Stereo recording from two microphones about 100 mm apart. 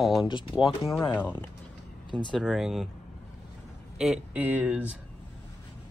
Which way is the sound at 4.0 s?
10° right (ahead or behind).